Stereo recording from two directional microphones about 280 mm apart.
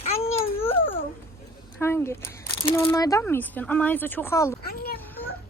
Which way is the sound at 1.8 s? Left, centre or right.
Centre.